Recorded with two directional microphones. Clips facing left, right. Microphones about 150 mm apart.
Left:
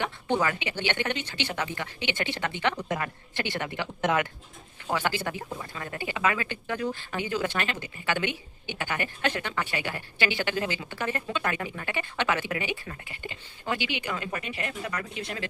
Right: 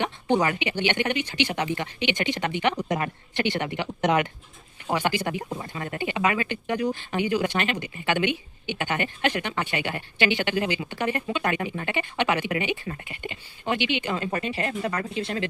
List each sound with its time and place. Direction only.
0.0 s speech: 20° right (ahead or behind)